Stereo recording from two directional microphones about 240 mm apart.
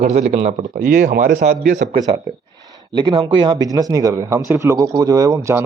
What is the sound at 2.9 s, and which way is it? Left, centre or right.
Speech, centre.